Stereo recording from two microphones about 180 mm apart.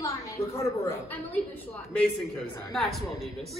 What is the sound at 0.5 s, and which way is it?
A woman's voice, 15° left (ahead or behind).